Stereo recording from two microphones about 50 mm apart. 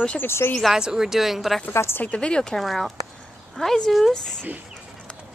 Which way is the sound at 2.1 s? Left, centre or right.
Centre.